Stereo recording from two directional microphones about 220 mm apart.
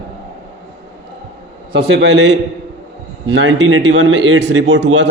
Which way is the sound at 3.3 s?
60° right (ahead or behind).